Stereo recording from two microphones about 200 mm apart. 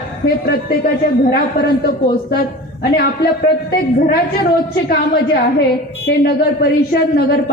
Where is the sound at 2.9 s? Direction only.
50° left (ahead or behind).